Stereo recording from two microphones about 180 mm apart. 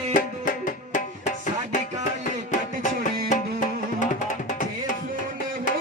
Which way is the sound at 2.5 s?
45° left (ahead or behind).